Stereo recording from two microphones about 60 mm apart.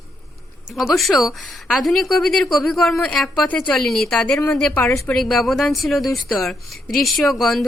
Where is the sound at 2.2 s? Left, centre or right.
Centre.